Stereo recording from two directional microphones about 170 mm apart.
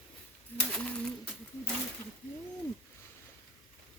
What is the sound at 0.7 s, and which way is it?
Bird, 5° left (ahead or behind).